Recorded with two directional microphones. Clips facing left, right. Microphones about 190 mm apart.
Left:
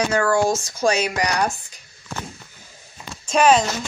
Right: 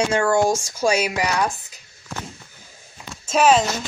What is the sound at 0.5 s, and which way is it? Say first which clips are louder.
Speech: even; 10° right (ahead or behind).